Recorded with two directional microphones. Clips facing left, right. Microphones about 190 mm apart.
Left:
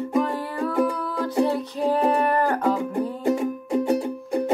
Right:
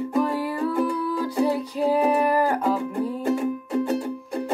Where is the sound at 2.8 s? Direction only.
15° left (ahead or behind).